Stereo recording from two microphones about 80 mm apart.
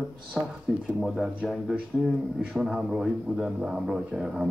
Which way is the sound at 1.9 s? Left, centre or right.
Centre.